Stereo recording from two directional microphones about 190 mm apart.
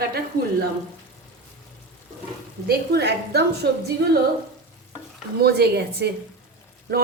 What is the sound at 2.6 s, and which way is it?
A woman's voice, 60° right (ahead or behind).